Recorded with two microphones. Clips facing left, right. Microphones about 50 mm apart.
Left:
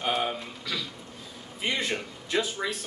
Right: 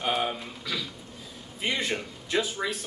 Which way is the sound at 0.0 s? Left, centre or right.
Centre.